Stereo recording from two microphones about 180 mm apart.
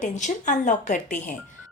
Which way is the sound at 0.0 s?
45° left (ahead or behind).